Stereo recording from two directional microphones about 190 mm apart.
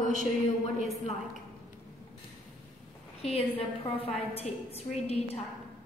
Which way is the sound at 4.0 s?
35° left (ahead or behind).